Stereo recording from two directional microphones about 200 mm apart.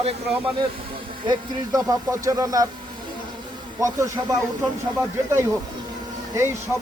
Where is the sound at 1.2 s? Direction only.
20° right (ahead or behind).